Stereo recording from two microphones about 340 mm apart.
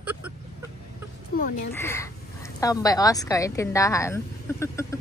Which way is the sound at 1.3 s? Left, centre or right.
Left.